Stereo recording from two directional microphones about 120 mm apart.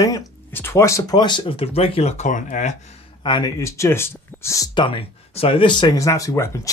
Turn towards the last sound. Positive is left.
turn(degrees=25)  # may be behind; listen again after turning